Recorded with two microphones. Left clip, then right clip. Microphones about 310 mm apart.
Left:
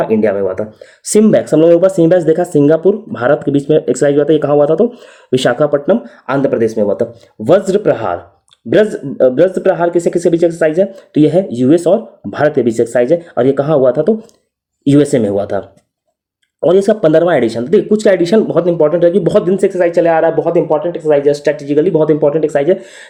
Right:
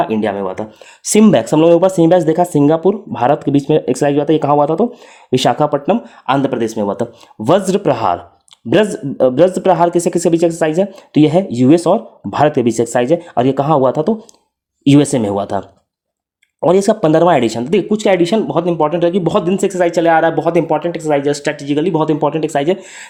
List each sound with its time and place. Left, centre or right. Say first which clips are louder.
0.1 s speech: left 5 dB; centre
16.6 s speech: left 2 dB; centre
22.3 s speech: left 5 dB; right
22.5 s speech: left 3 dB; centre